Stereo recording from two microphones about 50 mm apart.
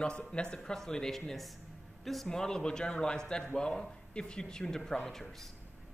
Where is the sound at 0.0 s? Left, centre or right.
Centre.